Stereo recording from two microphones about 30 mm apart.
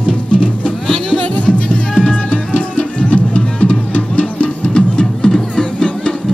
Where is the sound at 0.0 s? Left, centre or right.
Left.